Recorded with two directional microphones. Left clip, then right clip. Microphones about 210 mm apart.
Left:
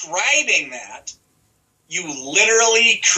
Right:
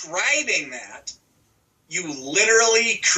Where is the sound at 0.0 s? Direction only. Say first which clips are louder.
Left 4 dB; 15° right (ahead or behind).